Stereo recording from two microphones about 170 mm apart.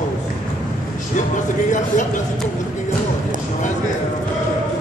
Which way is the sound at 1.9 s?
45° left (ahead or behind).